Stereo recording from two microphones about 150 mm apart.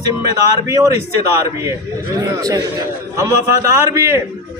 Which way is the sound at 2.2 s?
20° right (ahead or behind).